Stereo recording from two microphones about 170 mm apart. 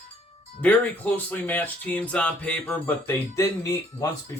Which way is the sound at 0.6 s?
10° left (ahead or behind).